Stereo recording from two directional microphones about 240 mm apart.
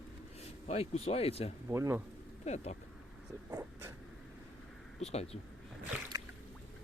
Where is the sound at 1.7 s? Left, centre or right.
Centre.